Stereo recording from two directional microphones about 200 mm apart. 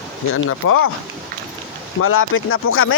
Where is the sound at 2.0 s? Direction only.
90° left.